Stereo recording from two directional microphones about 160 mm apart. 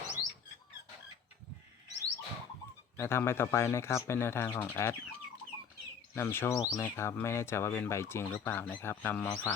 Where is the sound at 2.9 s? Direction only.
15° left (ahead or behind).